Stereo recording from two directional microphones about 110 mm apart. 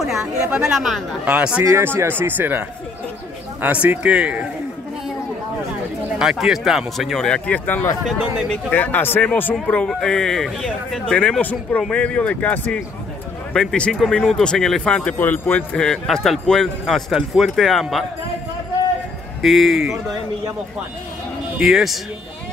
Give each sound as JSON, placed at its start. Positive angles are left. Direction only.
{"t": 0.0, "sound": "a man's voice", "side_deg": -5}
{"t": 1.6, "sound": "speech", "side_deg": -25}
{"t": 3.6, "sound": "a man's voice", "side_deg": -15}
{"t": 6.1, "sound": "a man's voice", "side_deg": -5}
{"t": 19.4, "sound": "a man's voice", "side_deg": 0}
{"t": 21.5, "sound": "a man's voice", "side_deg": -5}